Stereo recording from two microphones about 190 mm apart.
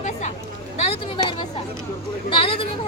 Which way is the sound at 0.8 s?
30° left (ahead or behind).